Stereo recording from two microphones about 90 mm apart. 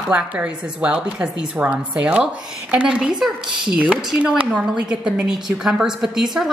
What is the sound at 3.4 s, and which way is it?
Speech, 60° right (ahead or behind).